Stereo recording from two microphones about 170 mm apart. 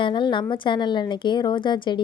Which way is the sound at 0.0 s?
30° left (ahead or behind).